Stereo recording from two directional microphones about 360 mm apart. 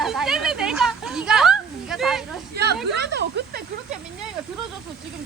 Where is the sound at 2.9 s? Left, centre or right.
Right.